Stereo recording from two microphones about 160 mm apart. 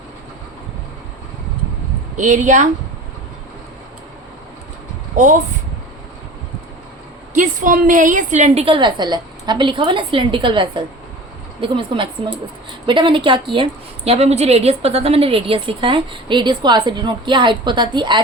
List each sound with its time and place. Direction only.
2.1 s a woman's voice: 50° right (ahead or behind)
5.1 s a woman's voice: 50° right (ahead or behind)
7.3 s a woman's voice: 55° right (ahead or behind); by 18.2 s 30° right (ahead or behind)